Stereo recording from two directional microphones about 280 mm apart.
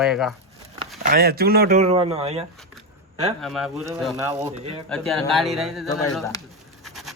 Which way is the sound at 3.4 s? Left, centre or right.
Centre.